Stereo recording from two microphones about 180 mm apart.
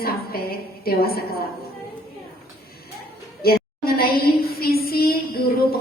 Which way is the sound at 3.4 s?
60° left (ahead or behind).